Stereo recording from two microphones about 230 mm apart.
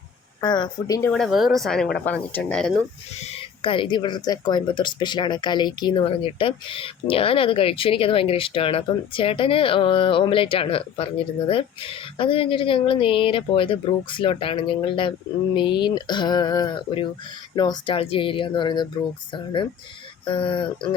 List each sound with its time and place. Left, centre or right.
0.4 s speech: centre
1.1 s speech: centre
3.2 s speech: left
20.2 s speech: left